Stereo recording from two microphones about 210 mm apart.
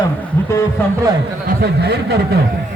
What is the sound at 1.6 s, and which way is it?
Speech, 50° right (ahead or behind).